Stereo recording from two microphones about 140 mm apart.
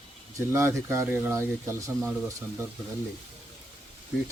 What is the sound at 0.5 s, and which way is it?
Speech, 20° right (ahead or behind).